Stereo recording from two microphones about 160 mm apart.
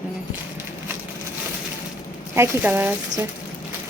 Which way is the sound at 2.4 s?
15° right (ahead or behind).